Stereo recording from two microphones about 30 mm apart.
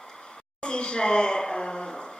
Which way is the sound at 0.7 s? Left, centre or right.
Left.